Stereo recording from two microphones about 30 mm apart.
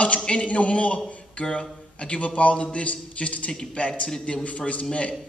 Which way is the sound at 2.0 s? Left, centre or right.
Left.